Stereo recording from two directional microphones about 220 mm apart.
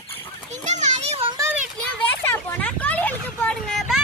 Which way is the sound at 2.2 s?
10° left (ahead or behind).